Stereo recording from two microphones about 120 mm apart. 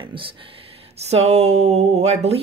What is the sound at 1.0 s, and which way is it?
Speech, 65° right (ahead or behind).